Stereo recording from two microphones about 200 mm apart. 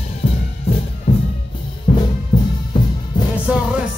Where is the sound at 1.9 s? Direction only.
35° left (ahead or behind).